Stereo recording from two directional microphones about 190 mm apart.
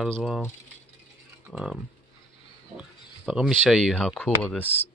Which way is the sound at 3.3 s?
5° right (ahead or behind).